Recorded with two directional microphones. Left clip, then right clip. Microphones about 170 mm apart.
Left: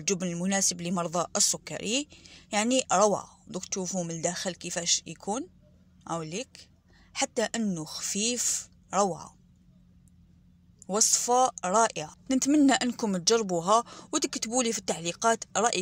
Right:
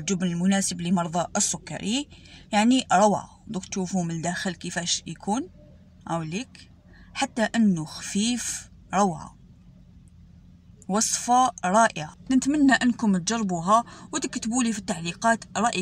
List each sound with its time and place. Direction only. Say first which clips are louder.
0.0 s speech: right 2 dB; 25° left (ahead or behind)
10.9 s speech: right 2 dB; 20° left (ahead or behind)
12.3 s speech: right 3 dB; 35° left (ahead or behind)